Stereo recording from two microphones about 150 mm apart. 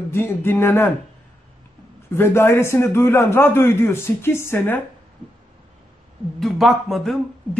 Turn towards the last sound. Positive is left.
turn(degrees=0)  # may be behind; listen again after turning